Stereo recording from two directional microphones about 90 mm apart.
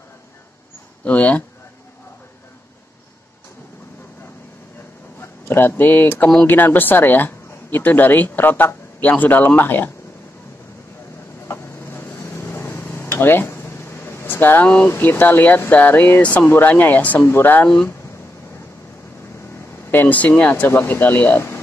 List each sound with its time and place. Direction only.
1.0 s speech: 15° left (ahead or behind)
5.2 s speech: 25° left (ahead or behind)
11.4 s a sound: 30° left (ahead or behind)
14.9 s speech: 20° left (ahead or behind)
19.9 s speech: 20° left (ahead or behind)